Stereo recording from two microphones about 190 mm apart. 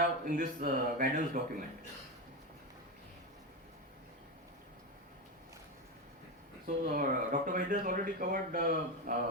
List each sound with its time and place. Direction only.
0.3 s speech: 45° right (ahead or behind)
6.7 s speech: 45° right (ahead or behind)